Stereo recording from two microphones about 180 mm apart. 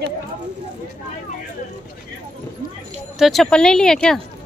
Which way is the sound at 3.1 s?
Centre (ahead or behind).